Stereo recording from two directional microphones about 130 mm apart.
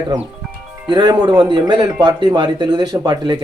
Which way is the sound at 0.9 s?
35° right (ahead or behind).